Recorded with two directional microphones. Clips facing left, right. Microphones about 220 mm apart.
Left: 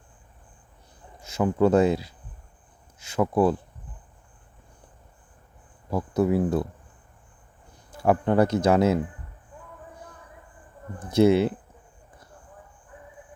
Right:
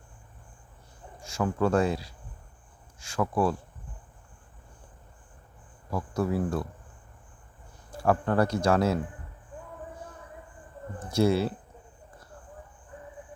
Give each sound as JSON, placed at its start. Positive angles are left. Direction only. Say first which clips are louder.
{"t": 1.2, "sound": "speech", "louder": "left 5 dB", "side_deg": 20}
{"t": 5.9, "sound": "speech", "louder": "left 6 dB", "side_deg": 20}
{"t": 8.0, "sound": "speech", "louder": "left 4 dB", "side_deg": 20}
{"t": 11.0, "sound": "speech", "louder": "left 6 dB", "side_deg": 20}